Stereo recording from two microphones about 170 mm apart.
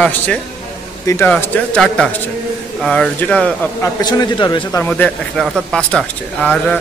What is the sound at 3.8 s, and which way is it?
Speech, 25° left (ahead or behind).